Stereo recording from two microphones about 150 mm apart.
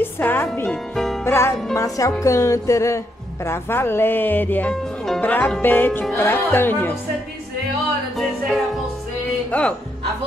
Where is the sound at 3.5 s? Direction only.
15° left (ahead or behind).